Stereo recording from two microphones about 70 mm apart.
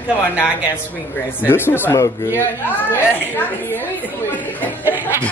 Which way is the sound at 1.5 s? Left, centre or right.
Left.